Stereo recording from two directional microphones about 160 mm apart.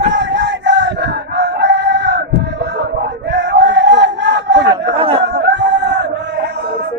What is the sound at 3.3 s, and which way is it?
Crowd, 90° right.